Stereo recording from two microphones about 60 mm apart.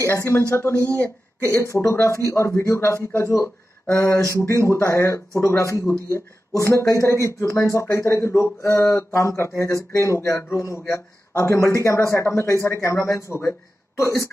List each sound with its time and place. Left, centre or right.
0.0 s speech: left
0.9 s speech: left
1.5 s speech: left
7.0 s speech: left